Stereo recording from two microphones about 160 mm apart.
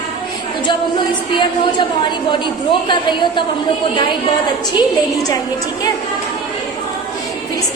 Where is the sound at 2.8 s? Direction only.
30° left (ahead or behind).